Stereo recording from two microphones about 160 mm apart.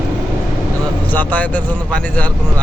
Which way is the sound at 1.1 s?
10° left (ahead or behind).